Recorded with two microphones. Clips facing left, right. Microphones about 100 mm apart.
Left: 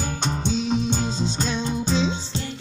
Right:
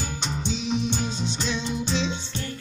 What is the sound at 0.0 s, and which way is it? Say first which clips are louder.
Music: left 4 dB; 45° left (ahead or behind).